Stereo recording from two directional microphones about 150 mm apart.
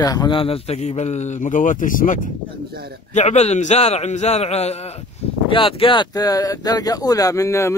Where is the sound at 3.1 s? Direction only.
50° left (ahead or behind).